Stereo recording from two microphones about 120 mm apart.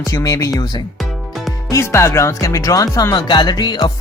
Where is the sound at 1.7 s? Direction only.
25° left (ahead or behind).